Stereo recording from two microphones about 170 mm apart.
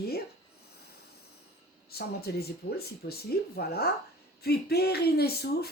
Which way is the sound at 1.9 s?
70° left (ahead or behind).